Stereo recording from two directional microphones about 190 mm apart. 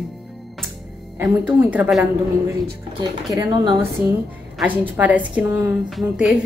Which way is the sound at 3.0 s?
20° right (ahead or behind).